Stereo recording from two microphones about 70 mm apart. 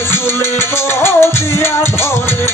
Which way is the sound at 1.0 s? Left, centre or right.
Left.